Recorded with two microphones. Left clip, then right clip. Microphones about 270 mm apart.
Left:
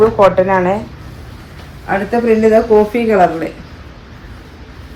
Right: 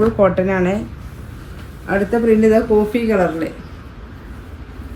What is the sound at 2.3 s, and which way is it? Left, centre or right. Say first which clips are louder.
A woman's voice: left 4 dB; centre.